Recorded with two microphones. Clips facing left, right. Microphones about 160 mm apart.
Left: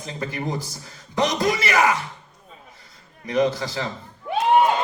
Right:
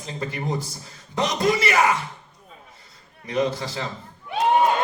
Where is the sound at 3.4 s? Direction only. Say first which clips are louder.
Left 3 dB; 25° right (ahead or behind).